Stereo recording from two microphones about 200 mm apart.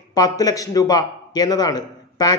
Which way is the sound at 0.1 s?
20° left (ahead or behind).